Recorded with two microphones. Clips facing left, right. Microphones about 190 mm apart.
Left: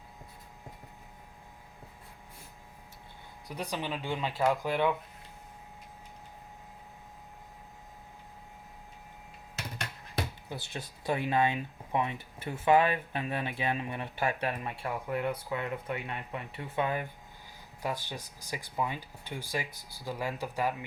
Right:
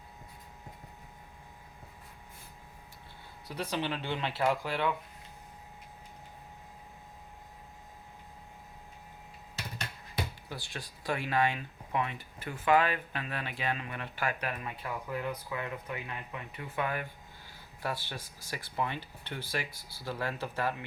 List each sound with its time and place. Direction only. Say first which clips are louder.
3.5 s speech: right 1 dB; 15° left (ahead or behind)
10.5 s speech: left 2 dB; 20° left (ahead or behind)